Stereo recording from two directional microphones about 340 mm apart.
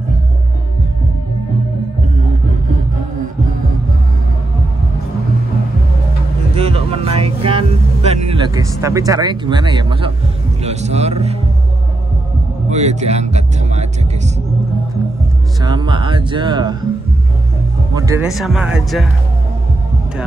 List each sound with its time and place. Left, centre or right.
6.5 s vehicle: centre
10.6 s speech: centre
12.6 s speech: centre
15.6 s music: centre
17.9 s speech: centre